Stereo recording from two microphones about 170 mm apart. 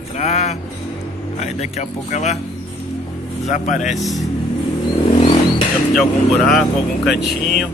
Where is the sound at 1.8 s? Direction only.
40° left (ahead or behind).